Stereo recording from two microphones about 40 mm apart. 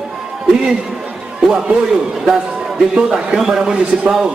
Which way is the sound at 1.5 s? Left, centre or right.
Centre.